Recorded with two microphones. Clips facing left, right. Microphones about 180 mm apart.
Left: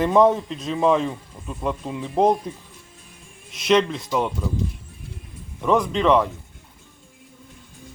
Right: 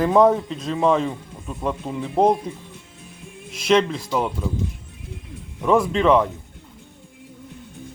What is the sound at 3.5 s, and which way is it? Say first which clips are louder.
Speech: right 1 dB; centre (ahead or behind).